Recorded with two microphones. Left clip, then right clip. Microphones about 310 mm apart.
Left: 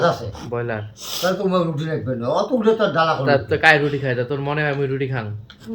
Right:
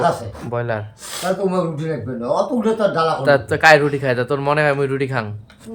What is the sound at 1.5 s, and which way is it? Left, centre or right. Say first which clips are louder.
Speech: even; centre.